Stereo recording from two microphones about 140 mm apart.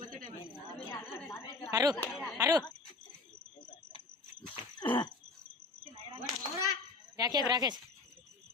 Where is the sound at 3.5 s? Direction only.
30° left (ahead or behind).